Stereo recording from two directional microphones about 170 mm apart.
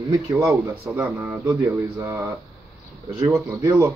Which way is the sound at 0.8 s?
5° right (ahead or behind).